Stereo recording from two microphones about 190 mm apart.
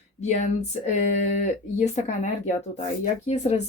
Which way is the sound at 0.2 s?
35° left (ahead or behind).